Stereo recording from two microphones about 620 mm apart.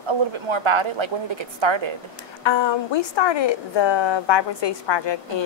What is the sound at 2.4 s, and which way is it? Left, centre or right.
A woman's voice, left.